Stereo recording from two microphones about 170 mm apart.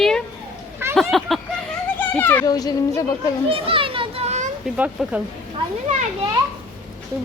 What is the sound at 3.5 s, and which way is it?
Children playing, 30° right (ahead or behind).